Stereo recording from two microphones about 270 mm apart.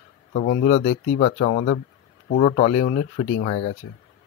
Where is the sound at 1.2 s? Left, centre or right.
Left.